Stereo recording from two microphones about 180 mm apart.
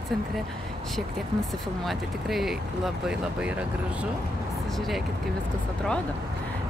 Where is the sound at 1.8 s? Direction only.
Centre (ahead or behind).